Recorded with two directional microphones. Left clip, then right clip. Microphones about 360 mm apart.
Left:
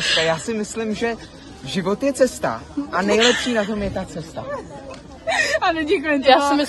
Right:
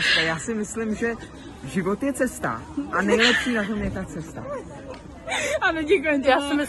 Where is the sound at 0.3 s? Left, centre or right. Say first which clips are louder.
Left 5 dB; centre.